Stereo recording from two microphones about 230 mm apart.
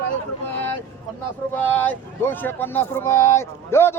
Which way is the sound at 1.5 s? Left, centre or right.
Centre.